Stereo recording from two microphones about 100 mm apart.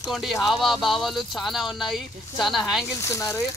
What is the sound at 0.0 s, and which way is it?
Speech, centre (ahead or behind).